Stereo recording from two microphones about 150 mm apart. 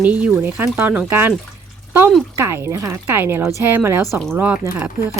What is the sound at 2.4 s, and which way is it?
Speech, 15° right (ahead or behind).